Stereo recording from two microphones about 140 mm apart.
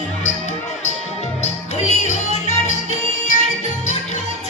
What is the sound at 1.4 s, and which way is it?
Music, 55° left (ahead or behind).